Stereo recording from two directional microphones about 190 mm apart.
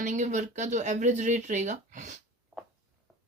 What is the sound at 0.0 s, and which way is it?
Speech, 40° right (ahead or behind).